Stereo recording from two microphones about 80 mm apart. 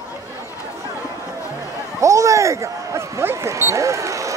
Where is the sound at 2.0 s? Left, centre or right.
Right.